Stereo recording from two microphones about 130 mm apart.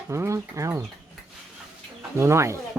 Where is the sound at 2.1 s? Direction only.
20° right (ahead or behind).